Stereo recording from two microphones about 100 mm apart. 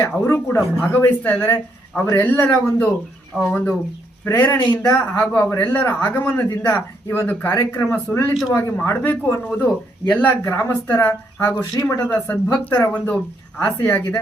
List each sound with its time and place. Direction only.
0.0 s a man's voice: 25° left (ahead or behind)
3.3 s speech: 10° right (ahead or behind)
4.3 s a man's voice: 20° left (ahead or behind)
8.3 s speech: 5° right (ahead or behind)
8.5 s a man's voice: 25° left (ahead or behind)